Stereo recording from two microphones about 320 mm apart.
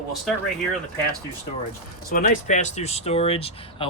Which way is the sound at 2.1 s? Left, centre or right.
Left.